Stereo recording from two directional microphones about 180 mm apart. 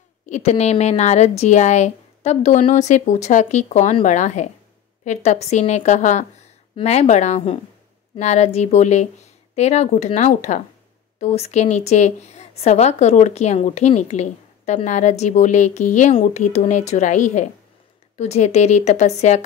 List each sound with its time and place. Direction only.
0.3 s a woman's voice: 40° left (ahead or behind)